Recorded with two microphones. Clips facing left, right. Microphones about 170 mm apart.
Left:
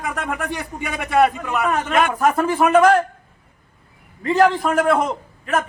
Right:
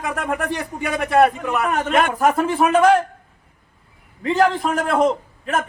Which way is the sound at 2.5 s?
Centre (ahead or behind).